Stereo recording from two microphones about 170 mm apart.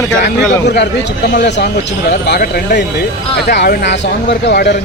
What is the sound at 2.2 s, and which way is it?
Speech, 75° left (ahead or behind).